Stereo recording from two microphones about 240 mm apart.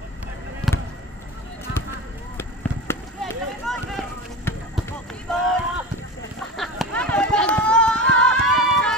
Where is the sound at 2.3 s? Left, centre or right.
Centre.